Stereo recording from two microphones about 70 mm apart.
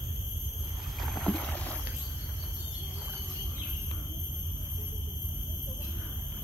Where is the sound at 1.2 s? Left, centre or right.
Centre.